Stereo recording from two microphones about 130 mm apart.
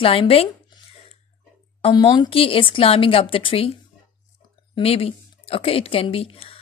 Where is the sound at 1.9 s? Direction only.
35° left (ahead or behind).